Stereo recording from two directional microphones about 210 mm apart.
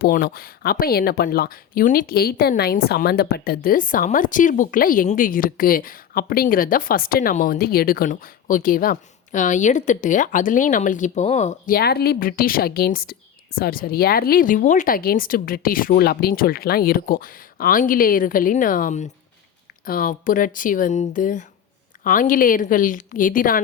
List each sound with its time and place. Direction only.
0.0 s speech: 45° left (ahead or behind)
11.7 s speech: 50° left (ahead or behind)